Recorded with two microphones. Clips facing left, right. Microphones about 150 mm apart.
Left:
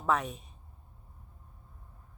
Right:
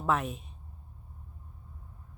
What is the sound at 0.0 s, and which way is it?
Speech, centre (ahead or behind).